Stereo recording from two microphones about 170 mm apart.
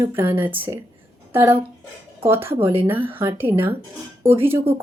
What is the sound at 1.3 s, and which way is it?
A woman's voice, 15° right (ahead or behind).